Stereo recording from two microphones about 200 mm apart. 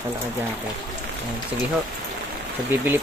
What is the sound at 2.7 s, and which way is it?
Speech, 10° right (ahead or behind).